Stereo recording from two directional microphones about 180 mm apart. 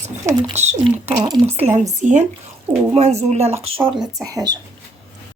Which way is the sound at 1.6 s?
35° right (ahead or behind).